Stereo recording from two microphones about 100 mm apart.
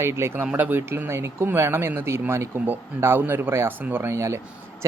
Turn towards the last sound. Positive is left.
turn(degrees=-30)  # may be behind; listen again after turning